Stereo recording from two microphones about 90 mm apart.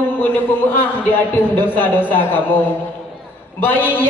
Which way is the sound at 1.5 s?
20° left (ahead or behind).